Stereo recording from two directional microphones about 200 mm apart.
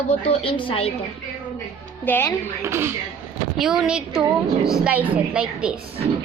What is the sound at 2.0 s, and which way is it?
Speech, 10° left (ahead or behind).